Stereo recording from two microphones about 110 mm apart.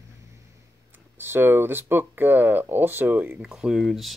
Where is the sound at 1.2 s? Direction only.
20° right (ahead or behind).